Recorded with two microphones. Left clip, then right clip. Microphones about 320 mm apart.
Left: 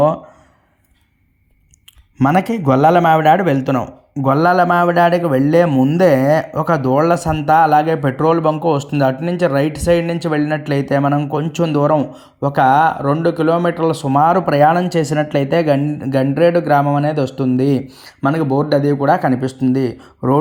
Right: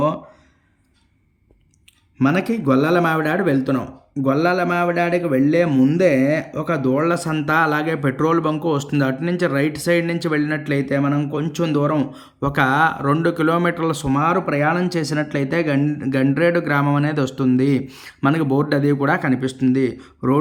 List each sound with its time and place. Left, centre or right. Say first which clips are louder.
2.1 s a man's voice: left 5 dB; centre
5.4 s speech: left 4 dB; left
5.6 s speech: left 4 dB; centre
18.4 s speech: left 3 dB; centre
18.7 s speech: left 8 dB; centre